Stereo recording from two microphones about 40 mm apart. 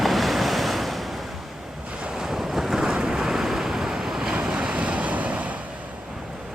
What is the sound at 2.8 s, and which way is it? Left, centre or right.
Waves, centre.